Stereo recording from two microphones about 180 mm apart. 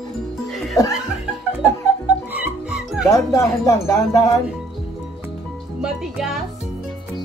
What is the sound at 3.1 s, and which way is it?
Speech, 15° left (ahead or behind).